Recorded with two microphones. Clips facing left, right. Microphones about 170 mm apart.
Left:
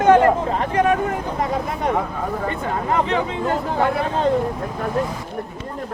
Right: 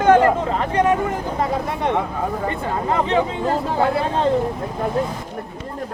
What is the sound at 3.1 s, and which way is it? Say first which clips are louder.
Speech: right 2 dB; 35° right (ahead or behind).